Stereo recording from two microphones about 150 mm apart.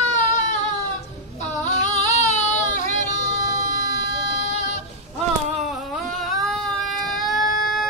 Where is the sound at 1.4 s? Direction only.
50° left (ahead or behind).